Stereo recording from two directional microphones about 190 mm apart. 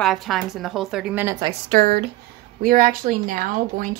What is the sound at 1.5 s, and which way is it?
Speech, 50° right (ahead or behind).